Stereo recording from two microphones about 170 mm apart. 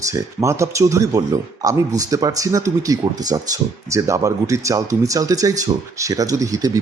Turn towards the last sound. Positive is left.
turn(degrees=-20)  # may be behind; listen again after turning